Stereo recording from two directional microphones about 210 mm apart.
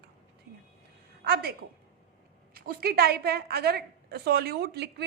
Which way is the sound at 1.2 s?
45° right (ahead or behind).